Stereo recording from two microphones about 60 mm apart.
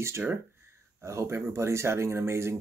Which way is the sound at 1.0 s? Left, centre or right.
Right.